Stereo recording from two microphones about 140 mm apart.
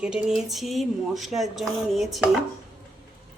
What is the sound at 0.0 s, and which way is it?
Speech, 5° right (ahead or behind).